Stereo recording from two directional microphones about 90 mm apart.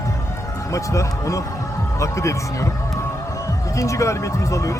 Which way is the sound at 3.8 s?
35° left (ahead or behind).